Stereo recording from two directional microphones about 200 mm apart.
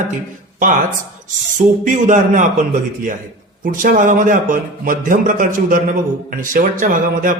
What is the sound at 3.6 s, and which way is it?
A man's voice, 45° right (ahead or behind).